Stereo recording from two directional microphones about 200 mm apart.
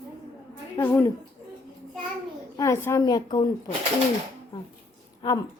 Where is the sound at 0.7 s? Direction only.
10° left (ahead or behind).